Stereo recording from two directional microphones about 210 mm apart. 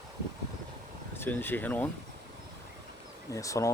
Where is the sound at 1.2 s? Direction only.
10° left (ahead or behind).